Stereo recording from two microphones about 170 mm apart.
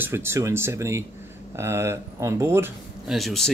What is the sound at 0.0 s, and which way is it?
Speech, 15° right (ahead or behind).